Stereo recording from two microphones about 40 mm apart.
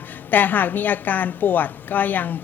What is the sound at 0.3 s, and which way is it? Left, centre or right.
A woman's voice, left.